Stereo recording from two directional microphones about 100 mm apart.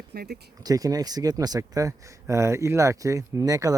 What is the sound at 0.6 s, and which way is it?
Speech, 35° right (ahead or behind).